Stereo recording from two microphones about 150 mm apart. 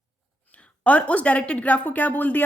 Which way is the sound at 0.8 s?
10° left (ahead or behind).